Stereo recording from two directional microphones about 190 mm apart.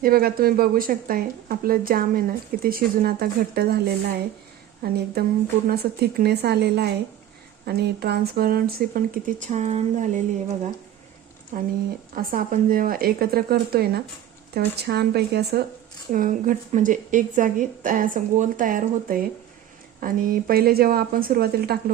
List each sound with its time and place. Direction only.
0.0 s a woman's voice: 55° right (ahead or behind)
16.1 s speech: 45° right (ahead or behind)